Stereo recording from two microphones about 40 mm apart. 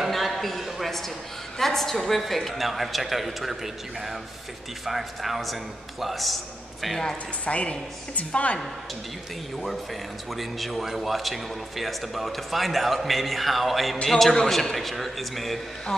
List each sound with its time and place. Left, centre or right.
0.1 s a sound: centre
1.6 s speech: centre
7.4 s a woman's voice: left
10.3 s speech: centre
14.0 s speech: centre